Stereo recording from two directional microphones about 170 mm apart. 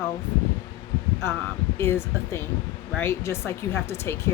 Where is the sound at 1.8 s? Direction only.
15° left (ahead or behind).